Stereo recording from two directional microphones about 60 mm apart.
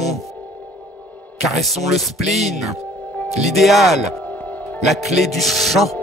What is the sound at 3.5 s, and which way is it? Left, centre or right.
Music, centre.